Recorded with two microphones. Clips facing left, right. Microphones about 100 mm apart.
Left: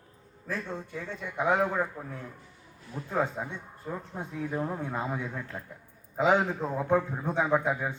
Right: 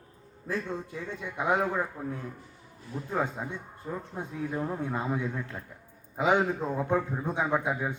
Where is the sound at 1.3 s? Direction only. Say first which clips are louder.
Left 1 dB; 10° right (ahead or behind).